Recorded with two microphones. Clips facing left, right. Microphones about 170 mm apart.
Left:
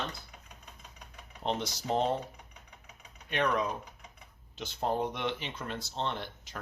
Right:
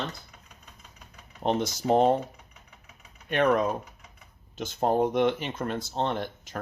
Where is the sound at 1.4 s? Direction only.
50° right (ahead or behind).